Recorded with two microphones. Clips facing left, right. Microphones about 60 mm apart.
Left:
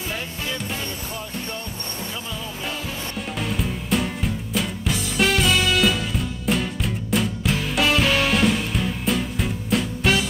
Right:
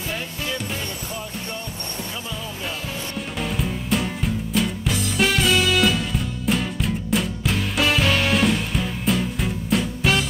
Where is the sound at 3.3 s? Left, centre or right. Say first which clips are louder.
Right 1 dB; centre.